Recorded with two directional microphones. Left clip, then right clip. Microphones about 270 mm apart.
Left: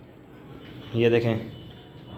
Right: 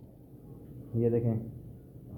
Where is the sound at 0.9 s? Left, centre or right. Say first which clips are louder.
Left 8 dB; centre.